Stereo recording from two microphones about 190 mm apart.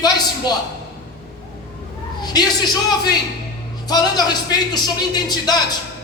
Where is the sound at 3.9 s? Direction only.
20° left (ahead or behind).